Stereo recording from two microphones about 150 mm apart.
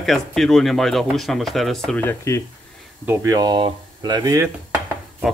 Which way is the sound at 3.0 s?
20° right (ahead or behind).